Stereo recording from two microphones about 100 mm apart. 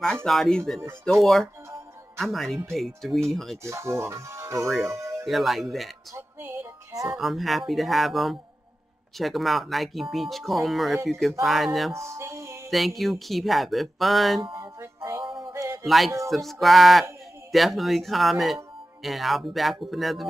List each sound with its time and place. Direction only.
0.0 s speech: 10° left (ahead or behind)
3.6 s speech: 30° right (ahead or behind)
4.6 s speech: centre (ahead or behind)
4.9 s music: 30° right (ahead or behind)
5.2 s speech: centre (ahead or behind)
6.1 s music: 25° right (ahead or behind)
7.1 s speech: centre (ahead or behind)
11.9 s music: 30° right (ahead or behind)
12.6 s speech: centre (ahead or behind)
14.4 s music: 55° right (ahead or behind)
14.8 s music: 30° right (ahead or behind)
15.1 s music: 50° right (ahead or behind)
15.5 s music: 25° right (ahead or behind)
15.8 s speech: centre (ahead or behind)